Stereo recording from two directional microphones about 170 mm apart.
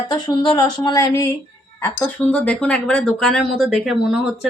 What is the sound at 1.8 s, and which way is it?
Speech, 10° left (ahead or behind).